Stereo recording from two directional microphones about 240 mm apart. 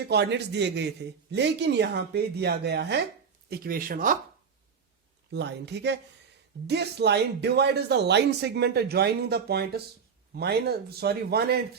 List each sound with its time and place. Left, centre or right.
0.1 s speech: right
5.3 s speech: right